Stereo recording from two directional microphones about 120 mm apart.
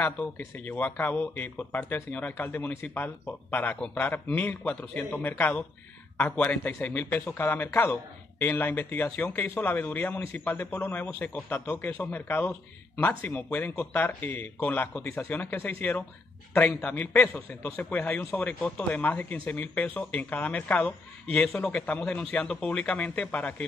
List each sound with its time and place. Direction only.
0.0 s speech: 15° left (ahead or behind)